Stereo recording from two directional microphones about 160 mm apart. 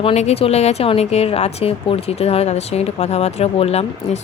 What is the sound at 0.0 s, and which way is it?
A woman's voice, 40° left (ahead or behind).